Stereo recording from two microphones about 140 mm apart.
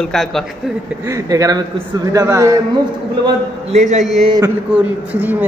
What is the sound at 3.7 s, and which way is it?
Speech, 55° right (ahead or behind).